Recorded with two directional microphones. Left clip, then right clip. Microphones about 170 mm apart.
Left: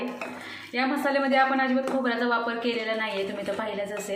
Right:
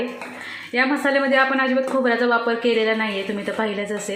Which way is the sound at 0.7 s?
40° right (ahead or behind).